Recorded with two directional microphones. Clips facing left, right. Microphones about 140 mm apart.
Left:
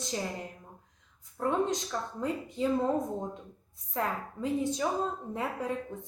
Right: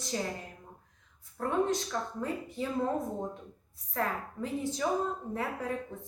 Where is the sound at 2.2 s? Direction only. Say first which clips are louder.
Left 2 dB; 20° left (ahead or behind).